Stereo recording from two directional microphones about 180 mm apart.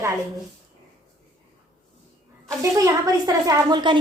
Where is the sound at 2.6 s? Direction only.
20° right (ahead or behind).